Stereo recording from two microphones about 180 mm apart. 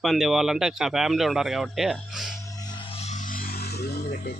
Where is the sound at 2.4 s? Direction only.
20° left (ahead or behind); by 4.3 s 55° left (ahead or behind).